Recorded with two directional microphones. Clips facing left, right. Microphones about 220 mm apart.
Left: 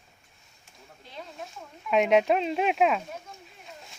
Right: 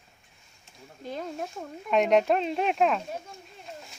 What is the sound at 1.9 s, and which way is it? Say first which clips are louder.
Speech: even; centre (ahead or behind).